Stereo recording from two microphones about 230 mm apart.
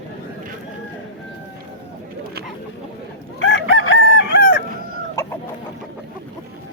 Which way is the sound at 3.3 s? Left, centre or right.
Left.